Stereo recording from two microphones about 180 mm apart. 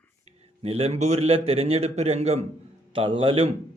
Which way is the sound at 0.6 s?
35° right (ahead or behind).